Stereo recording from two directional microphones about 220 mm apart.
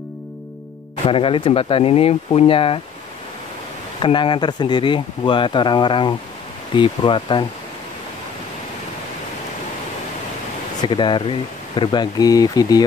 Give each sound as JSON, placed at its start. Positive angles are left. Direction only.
{"t": 1.0, "sound": "speech", "side_deg": 25}
{"t": 4.0, "sound": "speech", "side_deg": 20}
{"t": 10.8, "sound": "speech", "side_deg": 20}